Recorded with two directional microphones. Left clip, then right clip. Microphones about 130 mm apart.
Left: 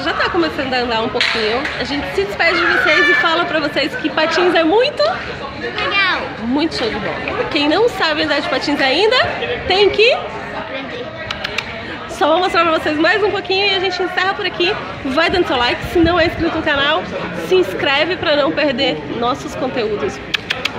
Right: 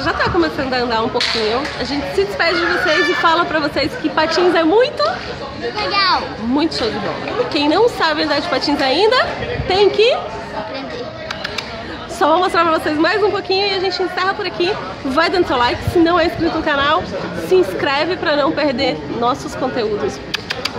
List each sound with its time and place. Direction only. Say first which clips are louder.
0.0 s speech: even; centre (ahead or behind)
5.9 s speech: even; 20° right (ahead or behind)
7.5 s speech: even; centre (ahead or behind)
12.2 s speech: even; 5° left (ahead or behind)